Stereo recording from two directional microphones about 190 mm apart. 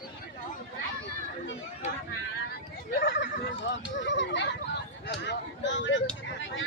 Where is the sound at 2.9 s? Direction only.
65° left (ahead or behind).